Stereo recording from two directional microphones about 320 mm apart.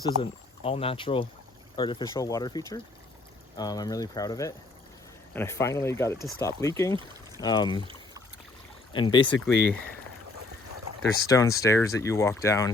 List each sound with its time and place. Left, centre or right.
0.2 s speech: centre
8.9 s speech: centre
11.3 s speech: centre